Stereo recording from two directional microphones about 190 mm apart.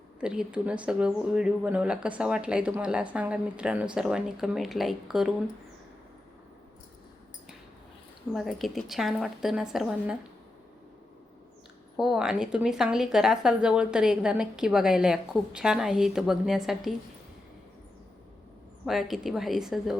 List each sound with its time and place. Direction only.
0.2 s speech: 5° right (ahead or behind)
8.3 s speech: centre (ahead or behind)
11.9 s speech: 5° right (ahead or behind)
18.9 s speech: centre (ahead or behind)